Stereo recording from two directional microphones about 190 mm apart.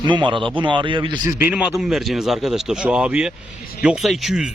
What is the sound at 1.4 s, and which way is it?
Speech, 5° right (ahead or behind).